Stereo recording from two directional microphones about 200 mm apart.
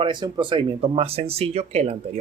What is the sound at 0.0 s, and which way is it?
Speech, 25° right (ahead or behind).